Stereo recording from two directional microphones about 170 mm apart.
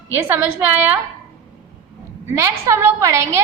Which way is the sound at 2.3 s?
15° right (ahead or behind).